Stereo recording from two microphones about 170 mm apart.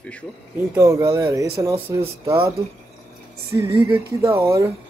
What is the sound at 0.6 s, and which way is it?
Speech, 20° right (ahead or behind).